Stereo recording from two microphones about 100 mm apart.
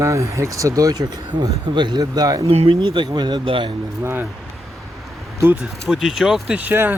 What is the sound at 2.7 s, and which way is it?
Speech, 55° right (ahead or behind).